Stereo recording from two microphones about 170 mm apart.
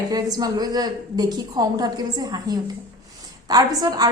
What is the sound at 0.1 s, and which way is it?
A woman's voice, 20° right (ahead or behind).